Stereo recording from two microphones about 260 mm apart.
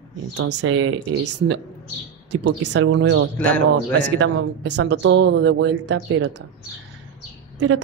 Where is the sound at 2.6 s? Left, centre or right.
Right.